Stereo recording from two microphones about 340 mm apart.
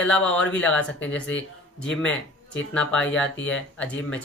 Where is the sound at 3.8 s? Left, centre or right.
Centre.